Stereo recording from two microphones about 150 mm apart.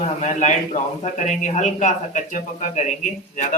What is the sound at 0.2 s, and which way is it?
A man's voice, 50° left (ahead or behind).